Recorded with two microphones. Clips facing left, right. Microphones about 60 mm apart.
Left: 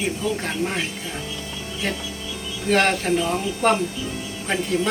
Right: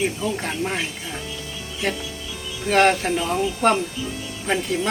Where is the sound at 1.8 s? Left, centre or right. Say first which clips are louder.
Right 2 dB; centre.